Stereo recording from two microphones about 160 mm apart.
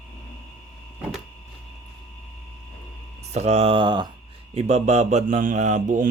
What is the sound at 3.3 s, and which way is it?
Speech, 45° right (ahead or behind).